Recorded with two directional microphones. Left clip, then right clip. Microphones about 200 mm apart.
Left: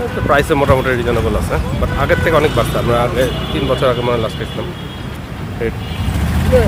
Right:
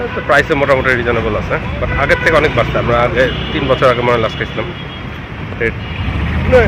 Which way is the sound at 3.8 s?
5° left (ahead or behind).